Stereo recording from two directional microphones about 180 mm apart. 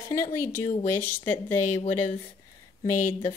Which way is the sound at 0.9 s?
10° left (ahead or behind).